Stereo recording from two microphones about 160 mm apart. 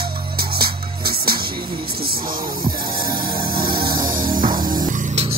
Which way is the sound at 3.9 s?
60° right (ahead or behind).